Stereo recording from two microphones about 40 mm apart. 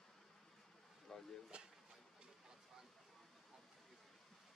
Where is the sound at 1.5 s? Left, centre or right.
Right.